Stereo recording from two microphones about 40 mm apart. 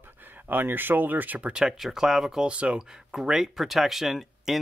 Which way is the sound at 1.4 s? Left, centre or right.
Right.